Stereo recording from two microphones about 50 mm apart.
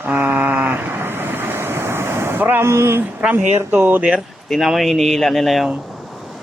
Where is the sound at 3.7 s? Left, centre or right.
Right.